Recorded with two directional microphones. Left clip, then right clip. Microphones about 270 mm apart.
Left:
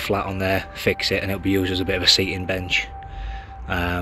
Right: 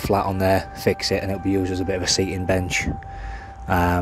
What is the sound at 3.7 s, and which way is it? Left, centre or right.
Speech, centre.